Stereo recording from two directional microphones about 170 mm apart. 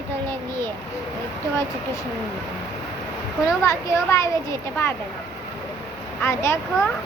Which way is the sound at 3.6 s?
15° left (ahead or behind).